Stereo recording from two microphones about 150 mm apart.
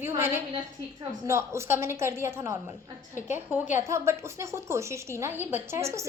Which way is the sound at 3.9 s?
20° right (ahead or behind).